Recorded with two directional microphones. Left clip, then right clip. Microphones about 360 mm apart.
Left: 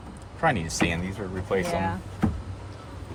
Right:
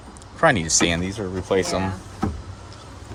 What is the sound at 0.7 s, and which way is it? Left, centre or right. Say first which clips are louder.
Speech: right 6 dB; right.